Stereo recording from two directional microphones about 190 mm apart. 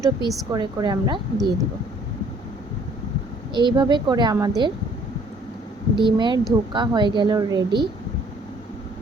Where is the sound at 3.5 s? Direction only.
25° right (ahead or behind).